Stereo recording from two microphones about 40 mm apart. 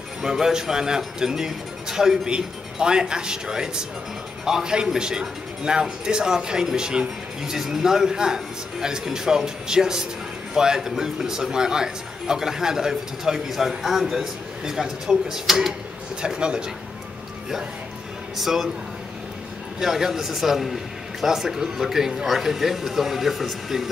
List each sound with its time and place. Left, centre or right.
0.2 s a man's voice: centre
16.2 s speech: right
18.4 s speech: centre
19.8 s a man's voice: centre